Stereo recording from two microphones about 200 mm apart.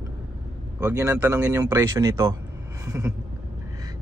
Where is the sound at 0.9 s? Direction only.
10° right (ahead or behind).